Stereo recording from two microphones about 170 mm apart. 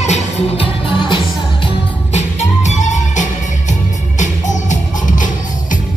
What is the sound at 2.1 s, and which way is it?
Music, 40° left (ahead or behind).